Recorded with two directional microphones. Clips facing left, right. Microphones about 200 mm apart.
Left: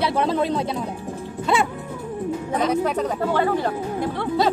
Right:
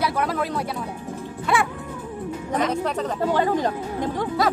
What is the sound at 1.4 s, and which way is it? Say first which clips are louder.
Music: left 2 dB; 25° left (ahead or behind).